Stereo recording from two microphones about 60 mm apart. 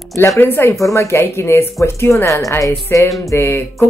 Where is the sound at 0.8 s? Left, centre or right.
Left.